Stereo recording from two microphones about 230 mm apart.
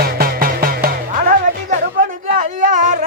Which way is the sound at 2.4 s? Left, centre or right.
Right.